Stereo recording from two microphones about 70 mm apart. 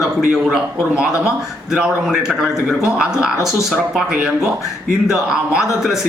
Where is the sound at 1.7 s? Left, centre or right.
Centre.